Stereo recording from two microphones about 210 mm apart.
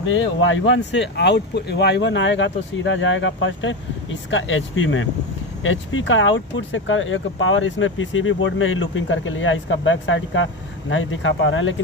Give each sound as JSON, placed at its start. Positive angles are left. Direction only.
{"t": 0.0, "sound": "speech", "side_deg": 65}